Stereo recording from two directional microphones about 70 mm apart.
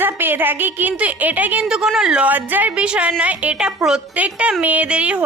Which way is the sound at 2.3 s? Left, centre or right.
Right.